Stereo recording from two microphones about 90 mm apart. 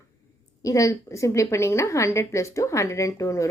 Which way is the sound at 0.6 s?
40° left (ahead or behind).